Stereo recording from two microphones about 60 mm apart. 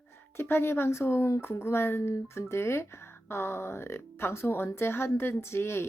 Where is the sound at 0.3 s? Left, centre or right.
Left.